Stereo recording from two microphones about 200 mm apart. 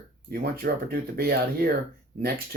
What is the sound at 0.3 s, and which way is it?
Speech, 50° right (ahead or behind).